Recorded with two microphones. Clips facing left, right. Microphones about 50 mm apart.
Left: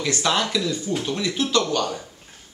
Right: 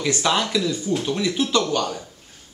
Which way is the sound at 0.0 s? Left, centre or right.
Centre.